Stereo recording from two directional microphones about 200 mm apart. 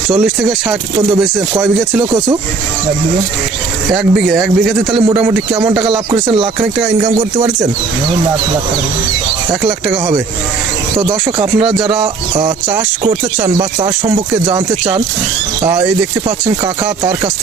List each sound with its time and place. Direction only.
0.1 s a man's voice: 5° right (ahead or behind)
3.9 s a man's voice: centre (ahead or behind)
4.9 s speech: 25° right (ahead or behind)
5.3 s speech: 15° right (ahead or behind); by 7.5 s 30° right (ahead or behind)
10.9 s speech: 25° right (ahead or behind)
16.8 s speech: 15° right (ahead or behind)